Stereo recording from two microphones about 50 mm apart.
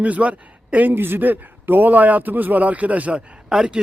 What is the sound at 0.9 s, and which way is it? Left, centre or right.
A man's voice, right.